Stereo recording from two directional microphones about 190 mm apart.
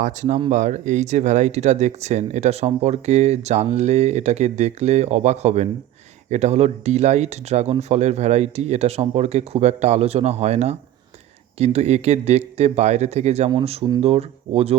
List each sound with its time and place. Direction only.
0.0 s speech: 40° right (ahead or behind)